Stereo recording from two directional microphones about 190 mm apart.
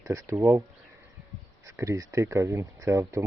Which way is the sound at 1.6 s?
15° right (ahead or behind).